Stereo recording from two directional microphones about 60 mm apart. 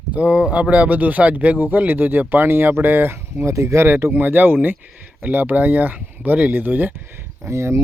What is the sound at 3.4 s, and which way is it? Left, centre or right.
Speech, right.